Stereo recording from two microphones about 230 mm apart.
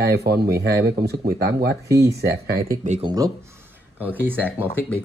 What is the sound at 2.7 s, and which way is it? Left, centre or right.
Speech, right.